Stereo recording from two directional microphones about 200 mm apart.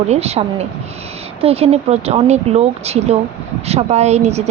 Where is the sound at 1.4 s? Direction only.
30° right (ahead or behind).